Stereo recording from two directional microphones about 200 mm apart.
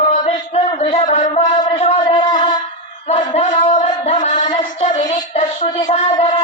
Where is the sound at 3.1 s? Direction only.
35° left (ahead or behind).